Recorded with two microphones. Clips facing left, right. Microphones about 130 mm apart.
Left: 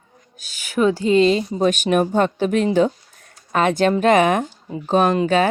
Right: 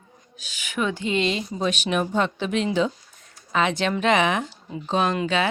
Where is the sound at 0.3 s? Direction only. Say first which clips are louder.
Left 7 dB; 40° left (ahead or behind).